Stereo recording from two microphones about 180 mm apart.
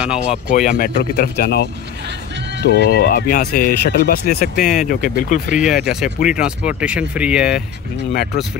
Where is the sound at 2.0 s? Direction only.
75° right (ahead or behind).